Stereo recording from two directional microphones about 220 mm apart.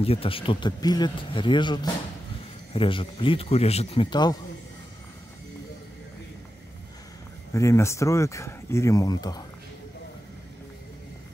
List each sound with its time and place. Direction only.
0.0 s speech: 25° left (ahead or behind)
7.5 s speech: 15° left (ahead or behind)